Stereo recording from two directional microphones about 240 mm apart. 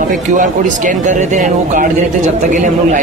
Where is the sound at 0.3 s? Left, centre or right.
Right.